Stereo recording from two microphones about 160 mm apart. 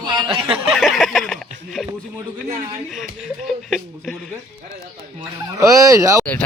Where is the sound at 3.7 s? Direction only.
Centre (ahead or behind).